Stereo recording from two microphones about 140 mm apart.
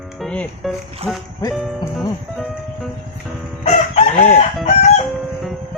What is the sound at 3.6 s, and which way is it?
Chicken, 55° left (ahead or behind).